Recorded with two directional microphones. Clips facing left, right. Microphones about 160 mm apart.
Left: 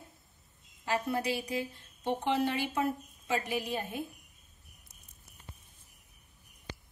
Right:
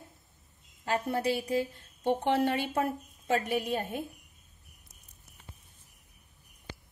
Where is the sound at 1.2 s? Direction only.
45° right (ahead or behind).